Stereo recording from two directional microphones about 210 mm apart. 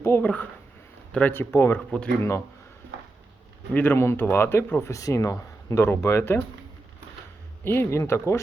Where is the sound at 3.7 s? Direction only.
10° left (ahead or behind).